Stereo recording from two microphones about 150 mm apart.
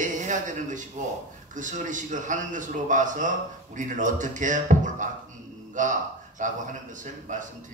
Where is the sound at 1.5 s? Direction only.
55° right (ahead or behind).